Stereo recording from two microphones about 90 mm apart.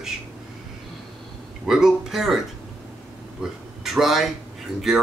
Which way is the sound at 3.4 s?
5° right (ahead or behind).